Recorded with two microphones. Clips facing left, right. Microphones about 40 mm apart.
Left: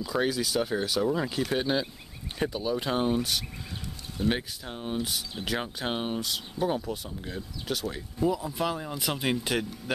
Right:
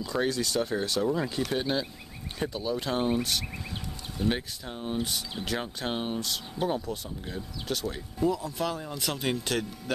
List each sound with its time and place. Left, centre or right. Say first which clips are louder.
0.0 s speech: left 1 dB; centre